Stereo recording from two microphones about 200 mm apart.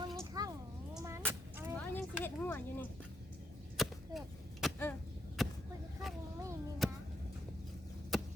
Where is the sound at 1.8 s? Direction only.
10° left (ahead or behind).